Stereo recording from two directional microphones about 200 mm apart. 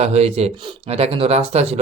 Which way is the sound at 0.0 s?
30° right (ahead or behind).